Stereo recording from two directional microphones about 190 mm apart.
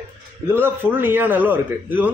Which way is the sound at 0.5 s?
10° right (ahead or behind).